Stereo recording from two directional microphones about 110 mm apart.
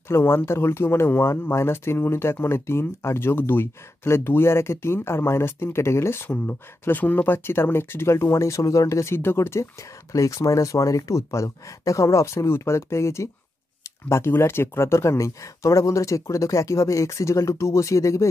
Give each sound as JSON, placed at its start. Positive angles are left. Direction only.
{"t": 0.1, "sound": "speech", "side_deg": 20}